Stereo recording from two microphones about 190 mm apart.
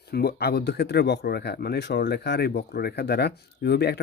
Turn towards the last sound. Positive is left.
turn(degrees=60)  # may be behind; listen again after turning